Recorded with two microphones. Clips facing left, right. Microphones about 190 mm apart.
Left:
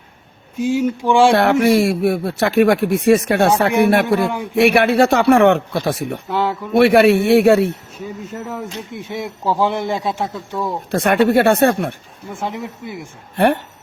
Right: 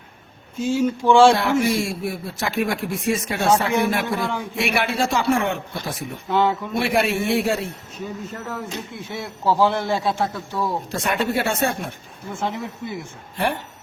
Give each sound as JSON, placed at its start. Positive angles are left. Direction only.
{"t": 0.6, "sound": "a man's voice", "side_deg": 15}
{"t": 1.3, "sound": "a man's voice", "side_deg": 65}
{"t": 6.2, "sound": "speech", "side_deg": 5}
{"t": 6.7, "sound": "a man's voice", "side_deg": 65}
{"t": 9.0, "sound": "a man's voice", "side_deg": 20}
{"t": 10.9, "sound": "a man's voice", "side_deg": 60}
{"t": 12.3, "sound": "a man's voice", "side_deg": 15}
{"t": 13.3, "sound": "a man's voice", "side_deg": 60}